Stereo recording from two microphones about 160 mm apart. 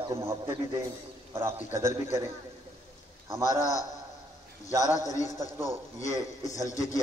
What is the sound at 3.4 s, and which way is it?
Speech, 20° left (ahead or behind).